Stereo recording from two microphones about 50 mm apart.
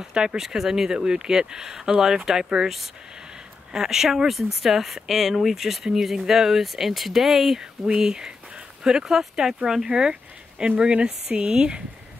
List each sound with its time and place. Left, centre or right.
0.1 s speech: centre